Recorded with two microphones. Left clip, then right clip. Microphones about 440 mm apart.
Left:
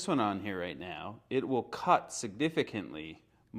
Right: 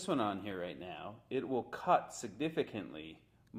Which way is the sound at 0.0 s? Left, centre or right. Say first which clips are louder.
Left 4 dB; left.